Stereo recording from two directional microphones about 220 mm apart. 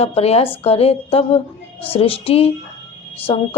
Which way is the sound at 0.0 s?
25° left (ahead or behind).